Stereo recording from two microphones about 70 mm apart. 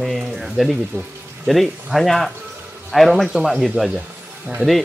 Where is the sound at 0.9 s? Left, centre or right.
Right.